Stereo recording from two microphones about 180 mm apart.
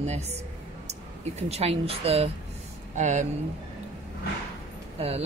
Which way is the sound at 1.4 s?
35° right (ahead or behind).